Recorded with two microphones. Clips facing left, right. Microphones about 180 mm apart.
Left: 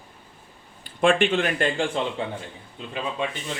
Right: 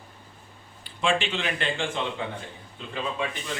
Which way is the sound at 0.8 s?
55° left (ahead or behind).